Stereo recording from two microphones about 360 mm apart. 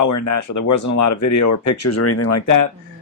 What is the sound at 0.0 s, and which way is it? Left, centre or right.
Speech, left.